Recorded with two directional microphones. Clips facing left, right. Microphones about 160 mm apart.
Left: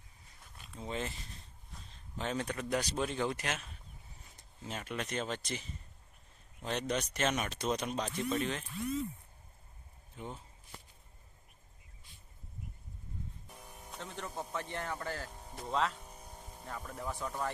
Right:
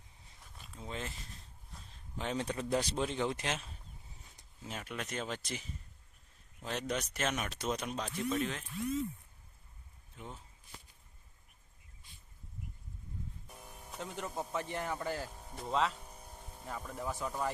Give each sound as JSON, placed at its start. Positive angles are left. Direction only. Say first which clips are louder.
{"t": 0.4, "sound": "a sound", "louder": "left 3 dB", "side_deg": 0}
{"t": 2.1, "sound": "speech", "louder": "even", "side_deg": -15}
{"t": 2.5, "sound": "speech", "louder": "right 1 dB", "side_deg": -30}
{"t": 4.6, "sound": "speech", "louder": "left 2 dB", "side_deg": -5}
{"t": 10.2, "sound": "speech", "louder": "left 4 dB", "side_deg": 0}
{"t": 13.5, "sound": "speech", "louder": "even", "side_deg": 0}
{"t": 15.4, "sound": "speech", "louder": "right 1 dB", "side_deg": 0}
{"t": 16.0, "sound": "vehicle", "louder": "left 1 dB", "side_deg": 10}